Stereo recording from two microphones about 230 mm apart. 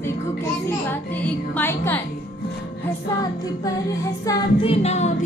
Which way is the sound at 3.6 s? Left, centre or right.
Centre.